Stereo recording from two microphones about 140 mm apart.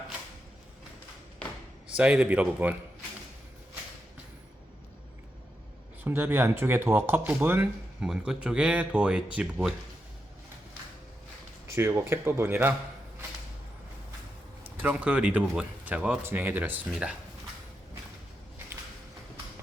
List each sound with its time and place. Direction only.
2.0 s speech: 10° right (ahead or behind)
6.1 s speech: 15° right (ahead or behind)
11.7 s speech: 20° right (ahead or behind)
14.8 s speech: 10° right (ahead or behind)